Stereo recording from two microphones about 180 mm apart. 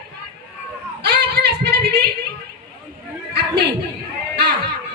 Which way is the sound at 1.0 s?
65° right (ahead or behind).